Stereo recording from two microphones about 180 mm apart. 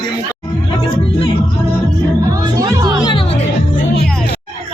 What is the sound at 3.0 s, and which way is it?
Music, 30° left (ahead or behind).